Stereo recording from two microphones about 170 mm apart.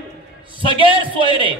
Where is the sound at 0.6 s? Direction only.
30° right (ahead or behind).